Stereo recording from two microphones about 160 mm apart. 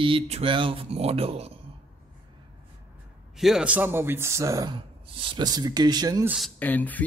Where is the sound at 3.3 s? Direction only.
Centre (ahead or behind); by 6.3 s 25° right (ahead or behind).